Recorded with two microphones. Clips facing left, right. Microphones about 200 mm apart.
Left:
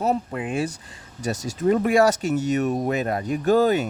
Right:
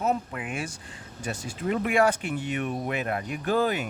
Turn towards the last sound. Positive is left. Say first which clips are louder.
# left 7 dB
turn(degrees=40)  # may be behind; listen again after turning